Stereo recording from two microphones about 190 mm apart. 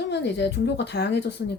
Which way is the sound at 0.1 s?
65° left (ahead or behind).